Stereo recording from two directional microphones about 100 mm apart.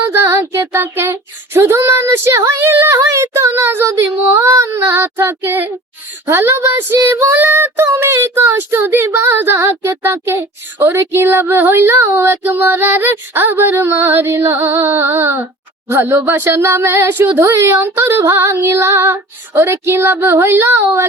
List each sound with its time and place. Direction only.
0.1 s child singing: 25° right (ahead or behind)